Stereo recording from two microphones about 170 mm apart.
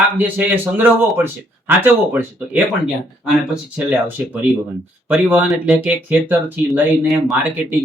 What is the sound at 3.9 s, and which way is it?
Speech, 10° right (ahead or behind).